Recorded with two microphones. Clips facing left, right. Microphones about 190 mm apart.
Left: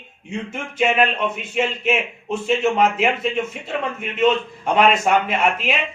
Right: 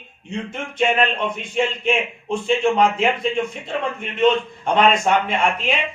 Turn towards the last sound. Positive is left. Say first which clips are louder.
# even
turn(degrees=5)  # may be behind; listen again after turning